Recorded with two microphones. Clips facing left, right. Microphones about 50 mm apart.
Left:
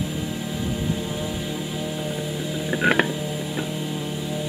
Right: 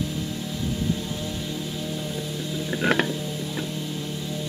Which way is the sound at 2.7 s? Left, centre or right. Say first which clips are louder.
Left 3 dB; centre.